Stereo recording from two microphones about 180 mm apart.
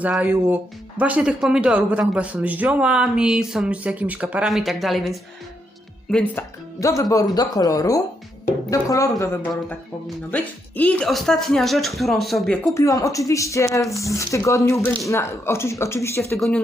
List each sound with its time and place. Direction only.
0.0 s speech: 10° right (ahead or behind)
12.7 s speech: 15° left (ahead or behind)